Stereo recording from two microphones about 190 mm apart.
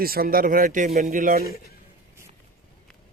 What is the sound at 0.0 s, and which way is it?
A man's voice, 50° right (ahead or behind).